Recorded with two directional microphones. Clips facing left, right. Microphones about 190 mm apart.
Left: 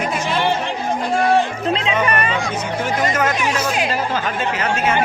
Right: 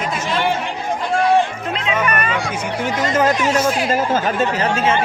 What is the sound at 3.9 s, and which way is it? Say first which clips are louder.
Speech: right 4 dB; 45° right (ahead or behind).